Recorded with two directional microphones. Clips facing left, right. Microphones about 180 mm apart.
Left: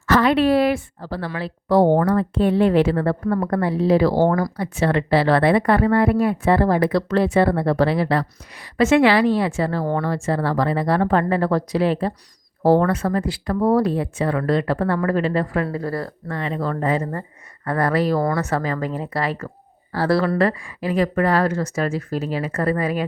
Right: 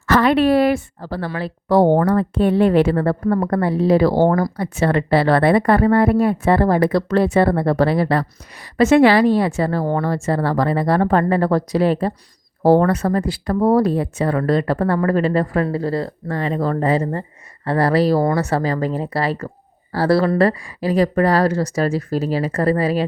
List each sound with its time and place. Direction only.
0.1 s a woman's voice: 55° right (ahead or behind); by 23.0 s 35° right (ahead or behind)